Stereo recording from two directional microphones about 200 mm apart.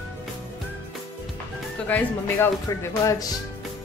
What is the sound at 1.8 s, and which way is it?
Speech, 10° left (ahead or behind).